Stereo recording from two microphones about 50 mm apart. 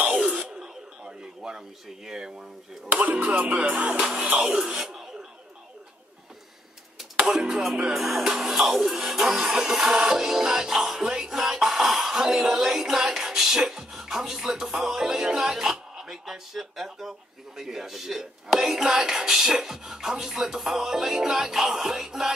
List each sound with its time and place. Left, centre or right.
0.4 s a sound: centre
2.0 s speech: centre
2.9 s music: right
4.0 s music: centre
4.4 s speech: centre
7.2 s speech: centre